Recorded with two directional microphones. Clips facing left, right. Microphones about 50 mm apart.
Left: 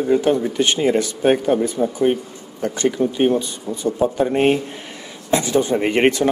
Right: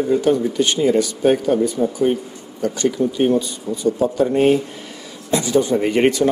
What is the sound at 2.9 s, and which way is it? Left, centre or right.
Speech, left.